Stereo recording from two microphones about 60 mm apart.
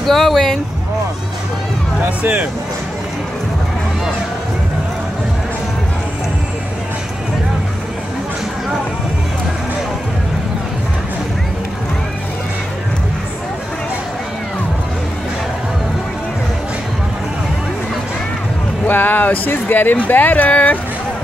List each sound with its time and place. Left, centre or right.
0.0 s speech: centre
2.0 s speech: right
18.9 s speech: left